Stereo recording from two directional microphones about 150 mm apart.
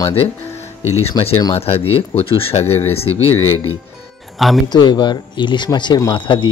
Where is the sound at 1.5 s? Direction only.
40° left (ahead or behind).